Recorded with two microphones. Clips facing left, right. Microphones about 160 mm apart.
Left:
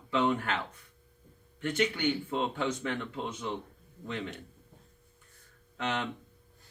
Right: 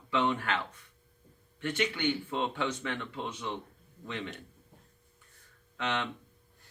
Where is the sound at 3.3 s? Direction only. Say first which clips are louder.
Left 1 dB; 45° left (ahead or behind).